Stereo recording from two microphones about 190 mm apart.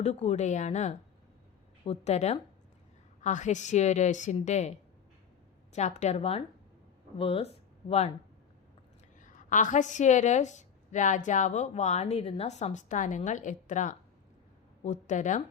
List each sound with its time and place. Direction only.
0.0 s a woman's voice: 35° left (ahead or behind)
5.7 s a woman's voice: 40° left (ahead or behind)
9.2 s a woman's voice: 40° left (ahead or behind)